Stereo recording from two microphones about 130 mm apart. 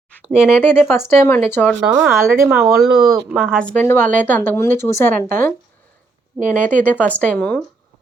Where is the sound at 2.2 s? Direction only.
20° right (ahead or behind).